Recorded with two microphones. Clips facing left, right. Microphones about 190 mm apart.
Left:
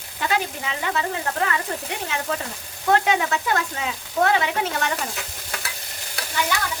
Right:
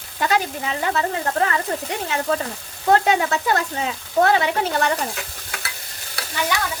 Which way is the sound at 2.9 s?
35° right (ahead or behind).